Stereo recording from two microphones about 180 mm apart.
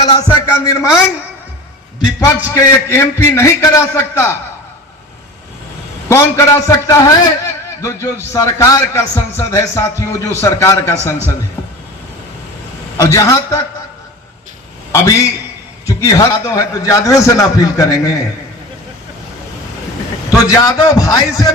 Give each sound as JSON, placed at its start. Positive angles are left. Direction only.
{"t": 0.0, "sound": "a man's voice", "side_deg": 20}
{"t": 2.2, "sound": "a man's voice", "side_deg": 15}
{"t": 6.1, "sound": "a man's voice", "side_deg": 15}
{"t": 13.0, "sound": "a man's voice", "side_deg": 15}
{"t": 14.9, "sound": "a man's voice", "side_deg": 15}
{"t": 20.4, "sound": "a man's voice", "side_deg": 20}